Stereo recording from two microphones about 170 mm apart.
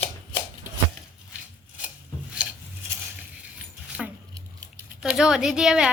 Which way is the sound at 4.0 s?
Centre (ahead or behind).